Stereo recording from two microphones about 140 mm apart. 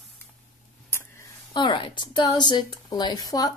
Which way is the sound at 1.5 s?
35° left (ahead or behind).